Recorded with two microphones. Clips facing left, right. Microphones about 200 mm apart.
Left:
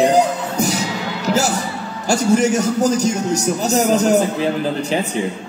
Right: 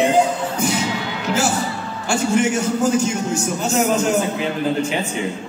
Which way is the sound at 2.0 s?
40° left (ahead or behind).